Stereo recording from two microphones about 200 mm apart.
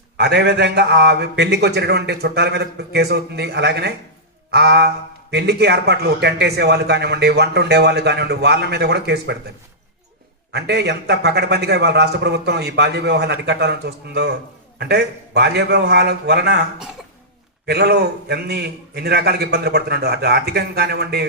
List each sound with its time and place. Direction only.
0.2 s a man's voice: 55° right (ahead or behind)
10.5 s a man's voice: 55° right (ahead or behind)
17.7 s a man's voice: 55° right (ahead or behind)